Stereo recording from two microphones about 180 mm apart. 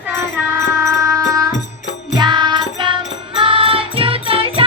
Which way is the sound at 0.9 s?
15° right (ahead or behind).